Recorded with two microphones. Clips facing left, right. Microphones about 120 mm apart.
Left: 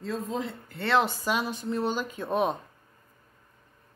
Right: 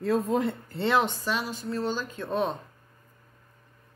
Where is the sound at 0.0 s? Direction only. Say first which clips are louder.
Right 7 dB; 60° right (ahead or behind).